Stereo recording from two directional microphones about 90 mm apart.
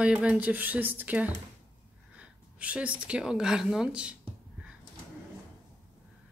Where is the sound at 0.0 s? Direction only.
10° right (ahead or behind).